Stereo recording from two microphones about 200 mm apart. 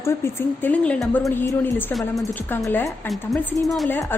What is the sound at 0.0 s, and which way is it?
A woman's voice, 10° left (ahead or behind).